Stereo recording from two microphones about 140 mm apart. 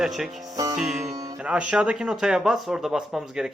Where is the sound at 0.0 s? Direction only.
Centre (ahead or behind).